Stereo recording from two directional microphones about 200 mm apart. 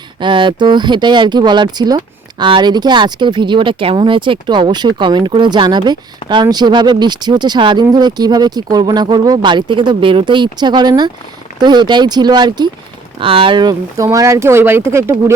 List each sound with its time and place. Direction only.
0.2 s speech: 25° right (ahead or behind)